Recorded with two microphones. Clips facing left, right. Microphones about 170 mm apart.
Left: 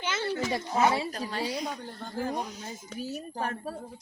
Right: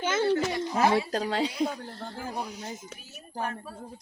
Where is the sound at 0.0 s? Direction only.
50° right (ahead or behind).